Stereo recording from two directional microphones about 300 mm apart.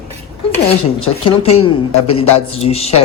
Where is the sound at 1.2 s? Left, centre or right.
Centre.